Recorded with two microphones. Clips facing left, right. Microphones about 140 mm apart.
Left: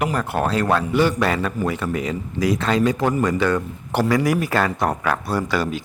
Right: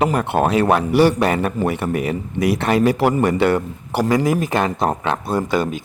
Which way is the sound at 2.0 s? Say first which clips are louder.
Right 2 dB; 60° right (ahead or behind).